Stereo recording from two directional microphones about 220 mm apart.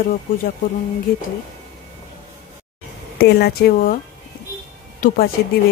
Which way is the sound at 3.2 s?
45° left (ahead or behind).